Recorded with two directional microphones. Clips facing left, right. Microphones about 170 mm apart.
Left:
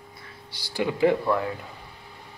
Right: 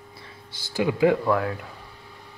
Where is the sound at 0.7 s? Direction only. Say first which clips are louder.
Right 2 dB; 15° right (ahead or behind).